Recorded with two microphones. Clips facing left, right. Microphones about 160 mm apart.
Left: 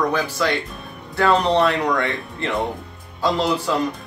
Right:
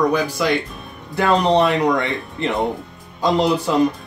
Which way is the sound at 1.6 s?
20° right (ahead or behind).